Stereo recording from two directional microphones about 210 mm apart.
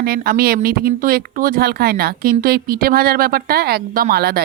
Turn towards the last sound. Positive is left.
turn(degrees=-45)  # may be behind; listen again after turning